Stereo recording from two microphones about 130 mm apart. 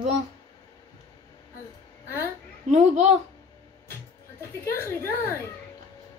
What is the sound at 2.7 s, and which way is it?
Speech, 55° right (ahead or behind).